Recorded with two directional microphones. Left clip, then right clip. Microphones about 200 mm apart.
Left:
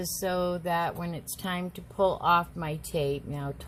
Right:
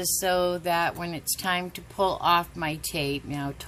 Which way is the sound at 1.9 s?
40° right (ahead or behind).